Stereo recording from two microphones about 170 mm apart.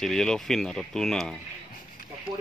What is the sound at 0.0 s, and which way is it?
Speech, 5° left (ahead or behind).